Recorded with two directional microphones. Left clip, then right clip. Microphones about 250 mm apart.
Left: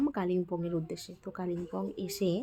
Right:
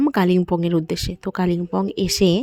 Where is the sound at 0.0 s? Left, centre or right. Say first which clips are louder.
Right 13 dB; right.